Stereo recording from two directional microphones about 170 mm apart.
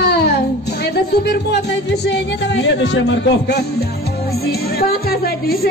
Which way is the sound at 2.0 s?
90° left.